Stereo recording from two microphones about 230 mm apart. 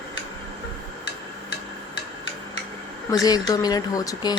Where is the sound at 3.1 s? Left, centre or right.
Centre.